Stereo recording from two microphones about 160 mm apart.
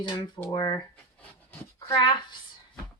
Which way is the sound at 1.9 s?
30° left (ahead or behind).